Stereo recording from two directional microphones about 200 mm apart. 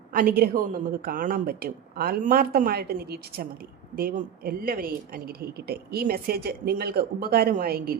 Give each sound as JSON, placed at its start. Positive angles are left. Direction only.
{"t": 0.1, "sound": "speech", "side_deg": -45}